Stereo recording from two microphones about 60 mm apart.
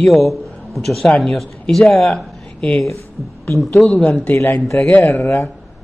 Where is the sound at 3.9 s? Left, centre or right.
Left.